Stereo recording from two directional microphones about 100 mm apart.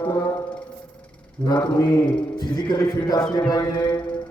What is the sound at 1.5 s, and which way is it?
Speech, 45° left (ahead or behind).